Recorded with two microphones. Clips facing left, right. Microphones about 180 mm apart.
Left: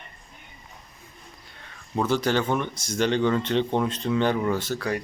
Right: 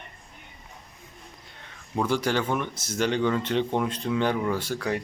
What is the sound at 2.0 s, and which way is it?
Speech, 10° right (ahead or behind).